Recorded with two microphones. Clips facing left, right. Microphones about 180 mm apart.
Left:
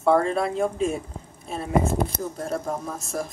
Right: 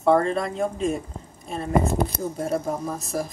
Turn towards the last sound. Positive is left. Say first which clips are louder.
# right 2 dB
turn(degrees=-5)  # may be behind; listen again after turning